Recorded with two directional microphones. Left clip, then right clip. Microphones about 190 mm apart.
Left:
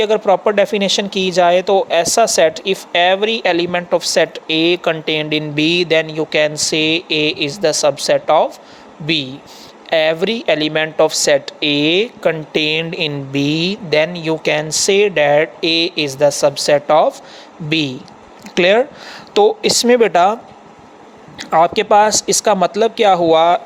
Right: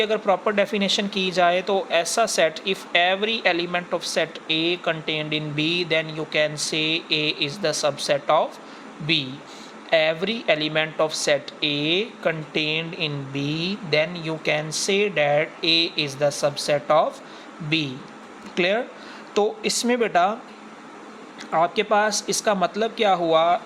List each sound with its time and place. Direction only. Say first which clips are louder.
0.0 s speech: left 8 dB; 35° left (ahead or behind)
21.3 s speech: left 8 dB; 45° left (ahead or behind)